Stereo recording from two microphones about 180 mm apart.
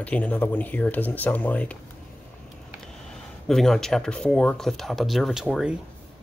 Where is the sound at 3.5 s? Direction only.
Centre (ahead or behind).